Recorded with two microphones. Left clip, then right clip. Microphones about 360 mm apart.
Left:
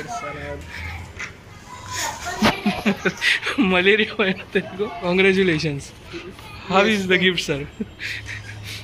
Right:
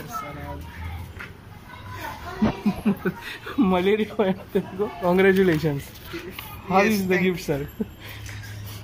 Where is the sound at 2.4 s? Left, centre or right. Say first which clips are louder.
Left 6 dB; left.